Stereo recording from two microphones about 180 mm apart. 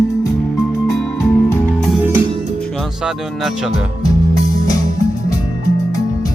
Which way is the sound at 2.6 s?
5° left (ahead or behind).